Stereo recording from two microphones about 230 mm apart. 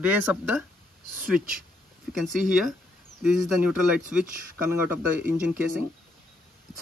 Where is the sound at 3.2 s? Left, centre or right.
Centre.